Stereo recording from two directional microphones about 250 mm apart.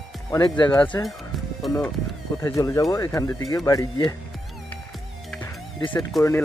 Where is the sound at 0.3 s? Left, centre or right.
Centre.